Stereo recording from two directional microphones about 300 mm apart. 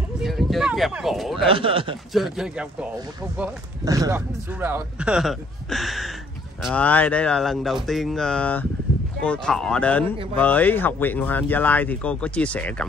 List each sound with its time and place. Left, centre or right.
0.2 s a sound: centre
1.5 s speech: centre
2.1 s speech: centre